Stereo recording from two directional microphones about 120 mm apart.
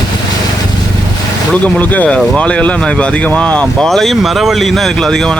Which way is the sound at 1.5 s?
10° left (ahead or behind).